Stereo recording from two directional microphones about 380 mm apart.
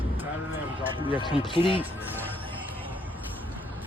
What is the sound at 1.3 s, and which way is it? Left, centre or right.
Speech, centre.